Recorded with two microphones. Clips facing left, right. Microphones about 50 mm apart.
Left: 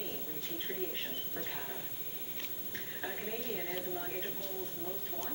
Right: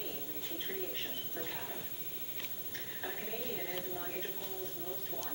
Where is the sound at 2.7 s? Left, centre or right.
Centre.